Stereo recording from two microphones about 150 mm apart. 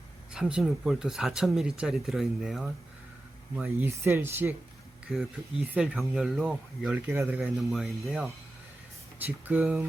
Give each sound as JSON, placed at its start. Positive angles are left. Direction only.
{"t": 0.3, "sound": "speech", "side_deg": -5}
{"t": 3.8, "sound": "speech", "side_deg": -20}
{"t": 5.1, "sound": "speech", "side_deg": -5}
{"t": 7.4, "sound": "speech", "side_deg": 0}